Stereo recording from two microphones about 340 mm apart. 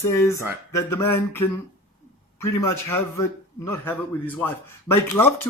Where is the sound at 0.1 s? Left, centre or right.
Centre.